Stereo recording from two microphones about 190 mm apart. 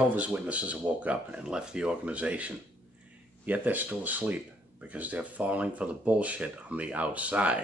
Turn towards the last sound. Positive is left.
turn(degrees=-5)  # may be behind; listen again after turning